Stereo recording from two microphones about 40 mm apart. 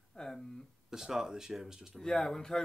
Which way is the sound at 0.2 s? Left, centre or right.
Centre.